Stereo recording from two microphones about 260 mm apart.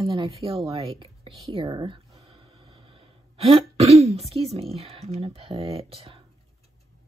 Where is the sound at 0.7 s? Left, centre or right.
Right.